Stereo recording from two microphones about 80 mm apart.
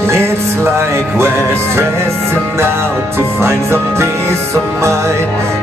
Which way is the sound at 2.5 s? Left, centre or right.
Right.